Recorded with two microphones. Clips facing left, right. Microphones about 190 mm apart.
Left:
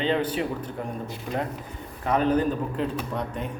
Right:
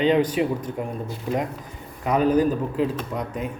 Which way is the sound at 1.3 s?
25° right (ahead or behind).